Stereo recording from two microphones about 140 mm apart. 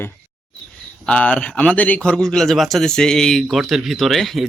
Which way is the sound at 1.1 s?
10° left (ahead or behind).